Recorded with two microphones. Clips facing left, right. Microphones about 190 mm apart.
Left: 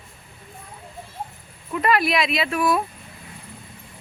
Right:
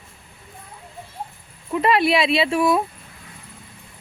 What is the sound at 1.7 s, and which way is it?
Speech, 25° right (ahead or behind).